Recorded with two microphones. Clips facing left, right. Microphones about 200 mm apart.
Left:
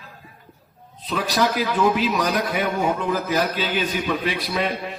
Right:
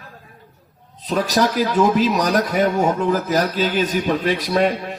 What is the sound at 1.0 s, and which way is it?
A man's voice, 45° right (ahead or behind).